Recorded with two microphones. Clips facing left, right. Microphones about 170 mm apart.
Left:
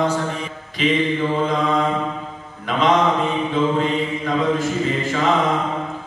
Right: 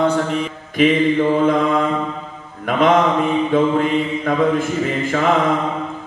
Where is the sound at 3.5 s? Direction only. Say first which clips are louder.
Right 3 dB; 55° right (ahead or behind).